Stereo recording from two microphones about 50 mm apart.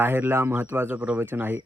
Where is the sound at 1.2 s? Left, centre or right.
Right.